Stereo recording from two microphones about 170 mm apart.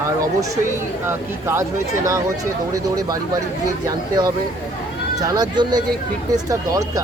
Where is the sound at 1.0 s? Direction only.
15° right (ahead or behind).